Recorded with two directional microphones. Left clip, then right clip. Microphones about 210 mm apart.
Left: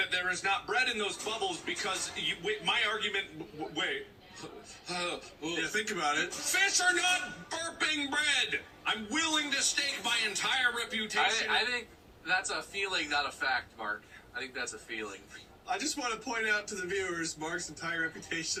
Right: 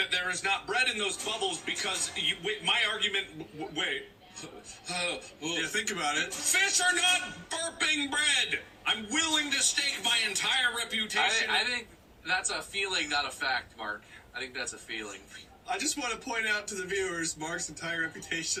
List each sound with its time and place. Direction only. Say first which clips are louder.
0.0 s a man's voice: right 1 dB; 15° right (ahead or behind)
4.9 s a man's voice: right 3 dB; 15° right (ahead or behind)